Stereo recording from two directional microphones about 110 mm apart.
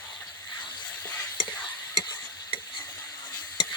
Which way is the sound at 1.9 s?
40° left (ahead or behind).